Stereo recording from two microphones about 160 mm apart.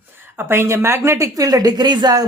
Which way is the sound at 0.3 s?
15° right (ahead or behind).